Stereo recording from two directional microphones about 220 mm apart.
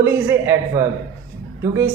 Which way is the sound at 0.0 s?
10° right (ahead or behind).